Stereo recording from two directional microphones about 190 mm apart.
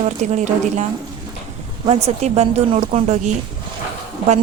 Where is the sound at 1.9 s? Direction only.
35° right (ahead or behind).